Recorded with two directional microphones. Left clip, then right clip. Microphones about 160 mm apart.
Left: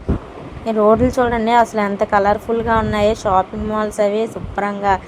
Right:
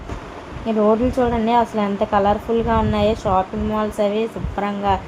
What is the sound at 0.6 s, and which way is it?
A woman's voice, 30° left (ahead or behind).